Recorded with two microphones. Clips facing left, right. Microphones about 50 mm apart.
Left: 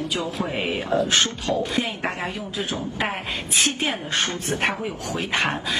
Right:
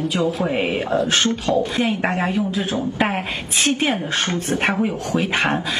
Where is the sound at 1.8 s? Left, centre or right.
Right.